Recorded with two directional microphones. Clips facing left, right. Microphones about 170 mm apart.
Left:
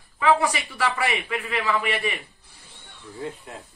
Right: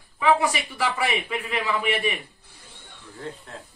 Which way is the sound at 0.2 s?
15° right (ahead or behind).